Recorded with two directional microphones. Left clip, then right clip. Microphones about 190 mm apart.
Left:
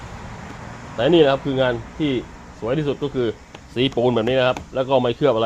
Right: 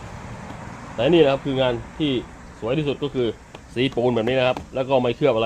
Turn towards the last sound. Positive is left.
turn(degrees=15)  # may be behind; listen again after turning